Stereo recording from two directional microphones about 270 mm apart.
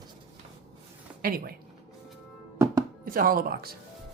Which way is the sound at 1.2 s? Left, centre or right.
Right.